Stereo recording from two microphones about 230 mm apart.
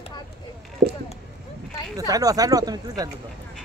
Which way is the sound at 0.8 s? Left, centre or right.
Right.